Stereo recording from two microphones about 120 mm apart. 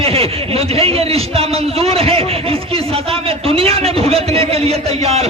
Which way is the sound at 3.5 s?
55° right (ahead or behind).